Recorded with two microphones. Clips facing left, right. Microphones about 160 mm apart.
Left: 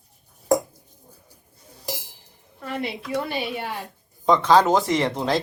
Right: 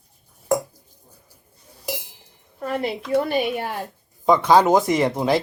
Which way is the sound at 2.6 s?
40° right (ahead or behind).